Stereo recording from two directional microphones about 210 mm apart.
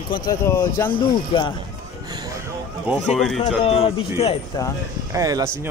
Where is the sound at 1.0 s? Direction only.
20° left (ahead or behind).